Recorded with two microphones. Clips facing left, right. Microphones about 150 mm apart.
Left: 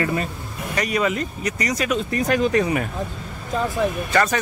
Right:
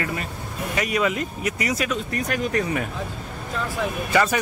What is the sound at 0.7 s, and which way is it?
Speech, 5° right (ahead or behind).